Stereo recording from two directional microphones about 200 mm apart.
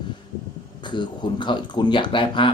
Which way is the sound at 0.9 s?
25° left (ahead or behind).